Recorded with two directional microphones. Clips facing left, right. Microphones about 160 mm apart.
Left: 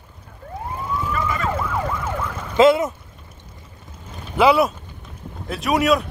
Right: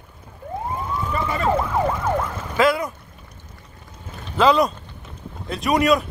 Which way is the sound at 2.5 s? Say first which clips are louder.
Left 5 dB; 25° left (ahead or behind).